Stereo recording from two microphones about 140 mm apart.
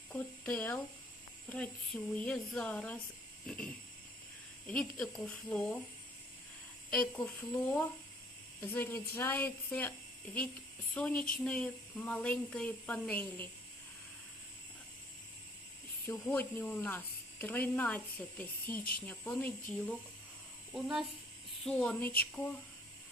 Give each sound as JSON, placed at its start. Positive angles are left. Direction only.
{"t": 0.1, "sound": "a sound", "side_deg": 10}
{"t": 1.5, "sound": "speech", "side_deg": 10}
{"t": 3.4, "sound": "a sound", "side_deg": 10}
{"t": 4.7, "sound": "a woman's voice", "side_deg": 5}
{"t": 8.6, "sound": "speech", "side_deg": 15}
{"t": 10.9, "sound": "speech", "side_deg": 10}
{"t": 16.2, "sound": "speech", "side_deg": 15}
{"t": 20.7, "sound": "a woman's voice", "side_deg": 0}
{"t": 21.6, "sound": "speech", "side_deg": 10}